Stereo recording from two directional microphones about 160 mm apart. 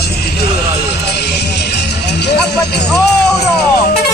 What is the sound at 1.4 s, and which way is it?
Music, 90° left.